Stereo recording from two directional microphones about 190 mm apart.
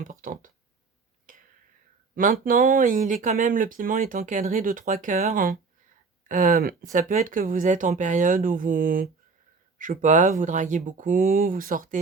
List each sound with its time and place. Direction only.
0.0 s speech: 45° right (ahead or behind)
1.3 s whispering: 45° right (ahead or behind)
2.1 s speech: 50° right (ahead or behind)